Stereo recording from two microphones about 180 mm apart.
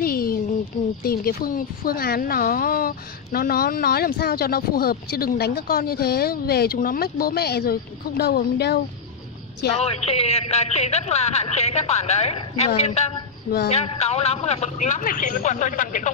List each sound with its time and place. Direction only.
0.0 s a sound: 55° left (ahead or behind)
1.0 s speech: 55° left (ahead or behind)
9.8 s a man's voice: 35° left (ahead or behind)